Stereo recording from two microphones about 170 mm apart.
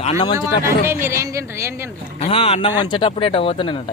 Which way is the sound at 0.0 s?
40° left (ahead or behind).